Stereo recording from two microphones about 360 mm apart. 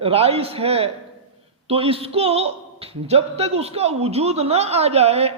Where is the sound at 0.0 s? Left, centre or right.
Centre.